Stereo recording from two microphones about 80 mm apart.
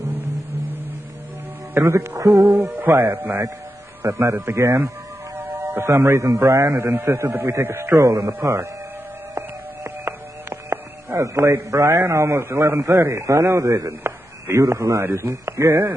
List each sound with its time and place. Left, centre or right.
0.2 s music: right
1.7 s a man's voice: right
2.4 s music: right
4.0 s a man's voice: right
5.3 s music: right
6.4 s a man's voice: right
9.8 s music: right
11.9 s a man's voice: right
15.7 s music: right